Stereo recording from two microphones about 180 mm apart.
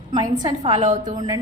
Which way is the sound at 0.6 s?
35° right (ahead or behind).